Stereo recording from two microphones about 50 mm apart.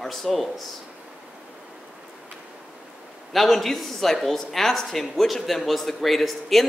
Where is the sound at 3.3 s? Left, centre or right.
Centre.